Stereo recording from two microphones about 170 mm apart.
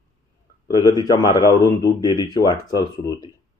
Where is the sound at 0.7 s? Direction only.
20° left (ahead or behind).